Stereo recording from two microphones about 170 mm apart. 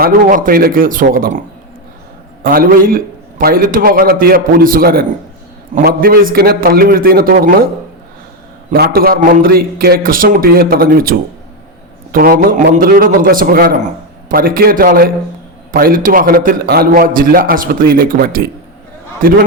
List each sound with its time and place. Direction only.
0.0 s a man's voice: 55° right (ahead or behind)
2.4 s a man's voice: 60° right (ahead or behind)
8.7 s a man's voice: 60° right (ahead or behind)